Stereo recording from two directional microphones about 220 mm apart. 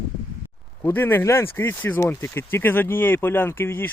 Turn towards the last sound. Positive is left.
turn(degrees=10)  # may be behind; listen again after turning